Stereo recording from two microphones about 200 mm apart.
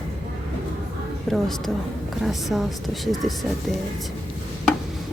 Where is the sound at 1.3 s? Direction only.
Centre (ahead or behind).